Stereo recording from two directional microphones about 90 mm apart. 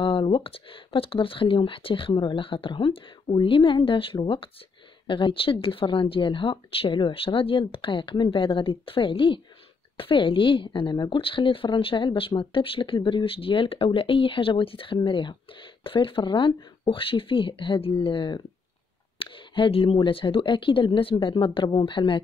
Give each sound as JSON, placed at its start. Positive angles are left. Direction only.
{"t": 0.0, "sound": "speech", "side_deg": 80}
{"t": 15.0, "sound": "speech", "side_deg": 60}
{"t": 15.8, "sound": "speech", "side_deg": 75}
{"t": 16.8, "sound": "speech", "side_deg": 75}